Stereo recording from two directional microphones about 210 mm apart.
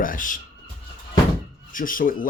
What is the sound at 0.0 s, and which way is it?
Speech, 40° left (ahead or behind).